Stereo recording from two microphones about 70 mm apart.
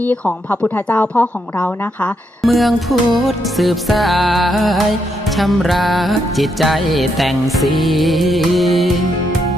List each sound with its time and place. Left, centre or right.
0.0 s a woman's voice: left
2.4 s music: centre